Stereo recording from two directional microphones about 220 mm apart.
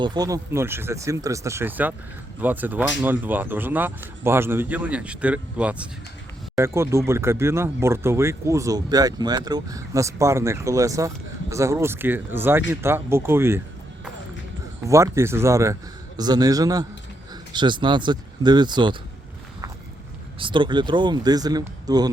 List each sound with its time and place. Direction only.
0.0 s speech: 20° right (ahead or behind)
14.8 s speech: 15° right (ahead or behind)
20.4 s speech: 20° right (ahead or behind)